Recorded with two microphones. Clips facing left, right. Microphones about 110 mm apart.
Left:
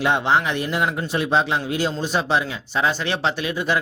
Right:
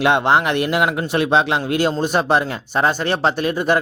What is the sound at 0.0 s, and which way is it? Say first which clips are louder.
A man's voice: right 4 dB; 65° right (ahead or behind).